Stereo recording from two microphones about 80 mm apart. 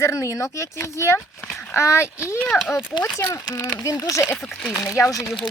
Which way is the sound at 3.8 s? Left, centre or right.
Left.